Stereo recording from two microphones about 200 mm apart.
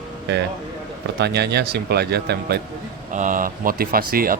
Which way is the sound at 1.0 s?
55° right (ahead or behind).